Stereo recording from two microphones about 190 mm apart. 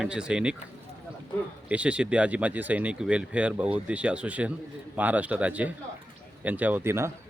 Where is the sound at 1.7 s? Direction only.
5° right (ahead or behind).